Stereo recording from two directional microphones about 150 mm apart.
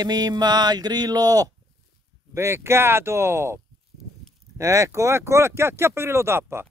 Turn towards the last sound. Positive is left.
turn(degrees=-15)  # may be behind; listen again after turning